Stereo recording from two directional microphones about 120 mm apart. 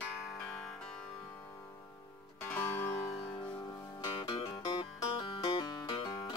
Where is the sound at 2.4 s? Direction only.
15° left (ahead or behind).